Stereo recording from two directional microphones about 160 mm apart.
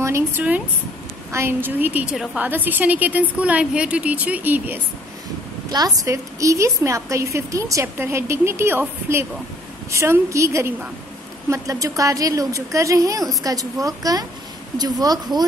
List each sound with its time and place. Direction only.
0.0 s a woman's voice: 15° right (ahead or behind)
5.7 s a woman's voice: 25° right (ahead or behind)